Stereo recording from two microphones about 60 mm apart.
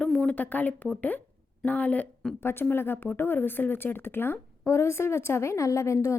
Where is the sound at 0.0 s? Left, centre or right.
Centre.